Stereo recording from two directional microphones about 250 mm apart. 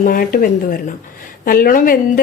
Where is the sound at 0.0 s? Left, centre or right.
Left.